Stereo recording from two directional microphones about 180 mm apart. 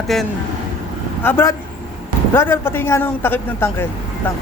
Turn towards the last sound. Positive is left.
turn(degrees=10)  # may be behind; listen again after turning